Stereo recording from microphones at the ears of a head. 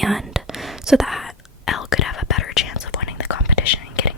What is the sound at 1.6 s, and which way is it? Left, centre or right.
Whispering, left.